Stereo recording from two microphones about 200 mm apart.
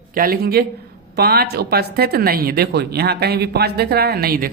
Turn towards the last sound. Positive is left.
turn(degrees=-50)  # may be behind; listen again after turning